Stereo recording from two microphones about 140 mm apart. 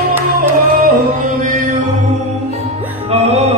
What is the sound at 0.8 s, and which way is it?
Music, 70° right (ahead or behind).